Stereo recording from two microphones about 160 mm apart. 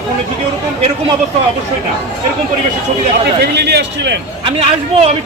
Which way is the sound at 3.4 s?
90° right.